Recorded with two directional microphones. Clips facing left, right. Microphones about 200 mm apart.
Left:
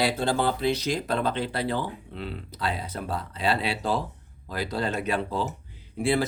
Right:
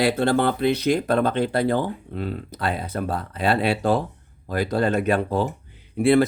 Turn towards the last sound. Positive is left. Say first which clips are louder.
# right 8 dB
turn(degrees=-60)  # may be behind; listen again after turning